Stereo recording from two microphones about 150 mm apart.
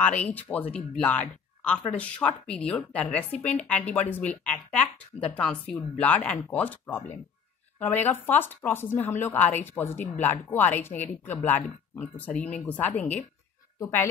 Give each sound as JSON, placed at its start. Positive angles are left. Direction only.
{"t": 0.0, "sound": "speech", "side_deg": 10}
{"t": 13.7, "sound": "speech", "side_deg": 20}